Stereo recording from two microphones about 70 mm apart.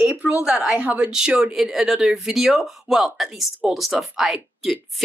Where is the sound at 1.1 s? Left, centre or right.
Centre.